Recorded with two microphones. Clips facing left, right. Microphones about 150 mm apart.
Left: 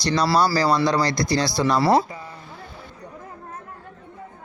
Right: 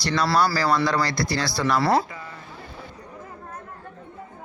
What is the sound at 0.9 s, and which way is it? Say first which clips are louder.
Speech: left 3 dB; 20° left (ahead or behind).